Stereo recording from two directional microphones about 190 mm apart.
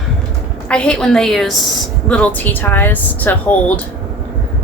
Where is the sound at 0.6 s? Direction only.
5° left (ahead or behind).